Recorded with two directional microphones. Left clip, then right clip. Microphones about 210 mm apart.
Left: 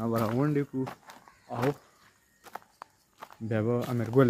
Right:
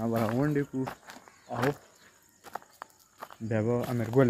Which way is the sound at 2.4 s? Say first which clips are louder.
Right 2 dB; 10° left (ahead or behind).